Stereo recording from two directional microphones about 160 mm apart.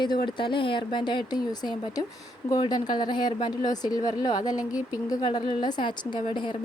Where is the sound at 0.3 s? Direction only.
30° left (ahead or behind).